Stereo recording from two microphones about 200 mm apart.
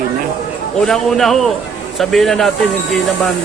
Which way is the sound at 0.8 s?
Centre (ahead or behind).